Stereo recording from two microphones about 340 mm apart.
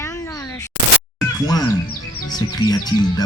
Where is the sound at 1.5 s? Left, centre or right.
Centre.